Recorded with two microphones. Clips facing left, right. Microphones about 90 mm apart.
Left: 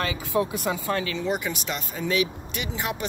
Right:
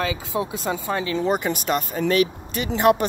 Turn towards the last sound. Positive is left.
turn(degrees=-60)  # may be behind; listen again after turning